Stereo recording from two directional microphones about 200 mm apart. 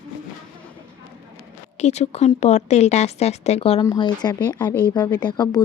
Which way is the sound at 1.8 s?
35° left (ahead or behind).